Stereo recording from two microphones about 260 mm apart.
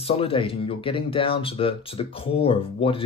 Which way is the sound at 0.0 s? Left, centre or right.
Left.